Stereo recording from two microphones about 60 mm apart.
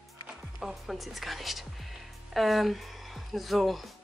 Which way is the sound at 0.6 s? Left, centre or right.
Centre.